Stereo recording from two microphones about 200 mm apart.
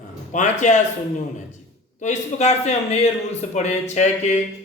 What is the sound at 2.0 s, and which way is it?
Speech, 35° left (ahead or behind).